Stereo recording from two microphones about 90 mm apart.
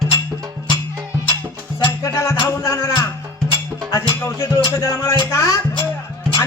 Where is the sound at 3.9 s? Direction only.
35° left (ahead or behind).